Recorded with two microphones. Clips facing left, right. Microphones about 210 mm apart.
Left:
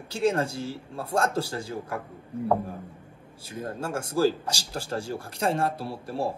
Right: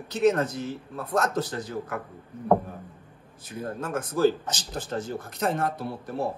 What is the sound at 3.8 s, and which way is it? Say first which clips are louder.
Speech: right 1 dB; 30° left (ahead or behind).